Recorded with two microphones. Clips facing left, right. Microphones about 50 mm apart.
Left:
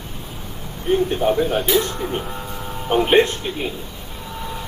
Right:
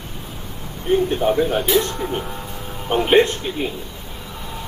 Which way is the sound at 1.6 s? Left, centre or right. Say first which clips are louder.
Right 1 dB; left.